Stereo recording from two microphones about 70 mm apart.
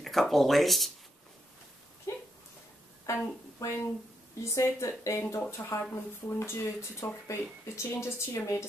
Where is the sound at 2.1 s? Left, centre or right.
Left.